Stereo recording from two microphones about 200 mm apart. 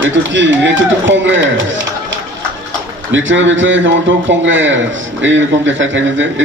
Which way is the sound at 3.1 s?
70° right (ahead or behind).